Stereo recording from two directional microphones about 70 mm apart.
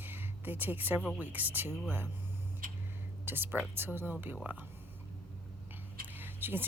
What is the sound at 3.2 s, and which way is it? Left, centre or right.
Speech, right.